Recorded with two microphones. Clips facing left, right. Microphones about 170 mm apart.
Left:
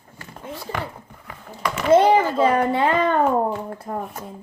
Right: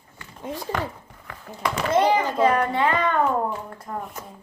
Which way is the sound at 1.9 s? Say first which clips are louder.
Left 6 dB; 30° left (ahead or behind).